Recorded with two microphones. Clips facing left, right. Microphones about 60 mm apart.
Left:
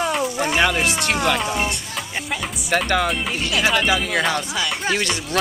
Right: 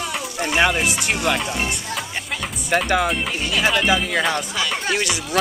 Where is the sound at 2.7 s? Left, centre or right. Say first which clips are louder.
Right 1 dB; centre.